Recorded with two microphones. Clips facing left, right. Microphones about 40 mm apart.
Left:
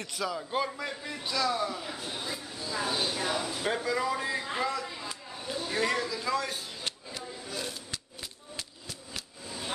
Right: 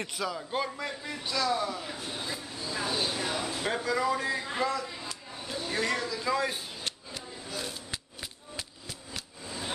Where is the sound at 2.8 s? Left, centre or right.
Left.